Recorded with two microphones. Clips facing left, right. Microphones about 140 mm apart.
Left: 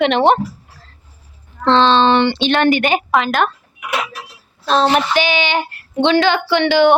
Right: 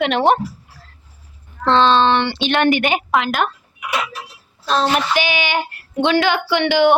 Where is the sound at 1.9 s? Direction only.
Centre (ahead or behind).